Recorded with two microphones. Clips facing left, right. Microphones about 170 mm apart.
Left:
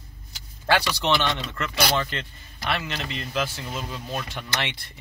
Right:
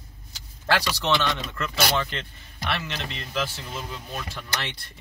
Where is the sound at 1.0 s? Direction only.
20° left (ahead or behind).